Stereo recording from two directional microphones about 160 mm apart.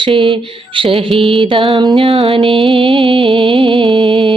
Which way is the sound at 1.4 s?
35° right (ahead or behind).